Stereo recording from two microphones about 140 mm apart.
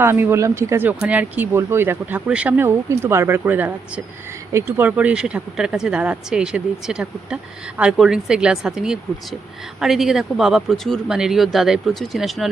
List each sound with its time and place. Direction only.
0.0 s speech: 15° right (ahead or behind); by 12.5 s centre (ahead or behind)